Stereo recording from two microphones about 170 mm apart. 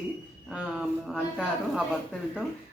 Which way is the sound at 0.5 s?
5° right (ahead or behind).